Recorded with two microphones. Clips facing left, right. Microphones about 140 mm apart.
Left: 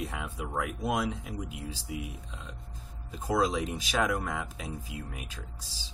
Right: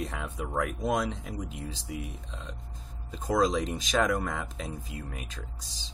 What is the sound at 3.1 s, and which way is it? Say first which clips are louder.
Speech: right 2 dB; 5° left (ahead or behind).